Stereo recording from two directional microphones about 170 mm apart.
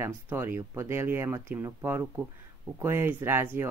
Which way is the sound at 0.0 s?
15° right (ahead or behind).